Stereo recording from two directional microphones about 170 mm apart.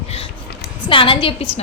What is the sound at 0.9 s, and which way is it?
Speech, 30° left (ahead or behind).